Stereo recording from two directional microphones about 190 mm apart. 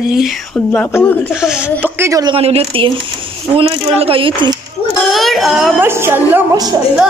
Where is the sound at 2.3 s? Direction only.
30° right (ahead or behind).